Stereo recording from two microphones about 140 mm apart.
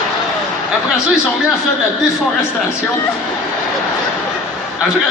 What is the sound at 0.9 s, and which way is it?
Speech, 5° right (ahead or behind).